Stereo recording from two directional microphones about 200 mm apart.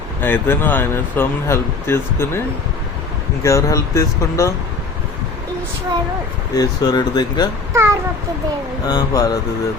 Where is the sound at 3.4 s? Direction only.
15° left (ahead or behind).